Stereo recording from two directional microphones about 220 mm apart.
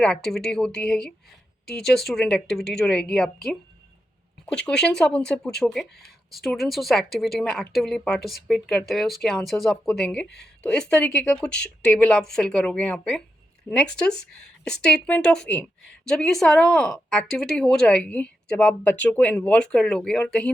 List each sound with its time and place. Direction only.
0.3 s speech: centre (ahead or behind)
10.2 s speech: 50° left (ahead or behind)
10.6 s speech: 5° left (ahead or behind)